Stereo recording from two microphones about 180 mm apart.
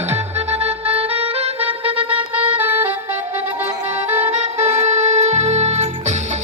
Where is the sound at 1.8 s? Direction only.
10° right (ahead or behind).